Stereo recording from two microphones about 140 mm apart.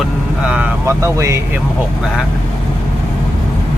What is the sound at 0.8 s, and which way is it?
Speech, 20° right (ahead or behind).